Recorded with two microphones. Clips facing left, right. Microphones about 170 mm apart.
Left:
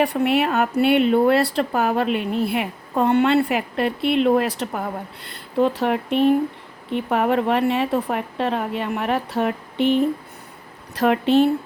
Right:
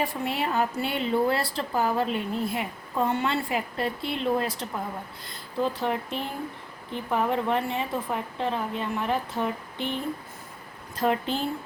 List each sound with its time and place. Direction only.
0.0 s a woman's voice: 70° left (ahead or behind)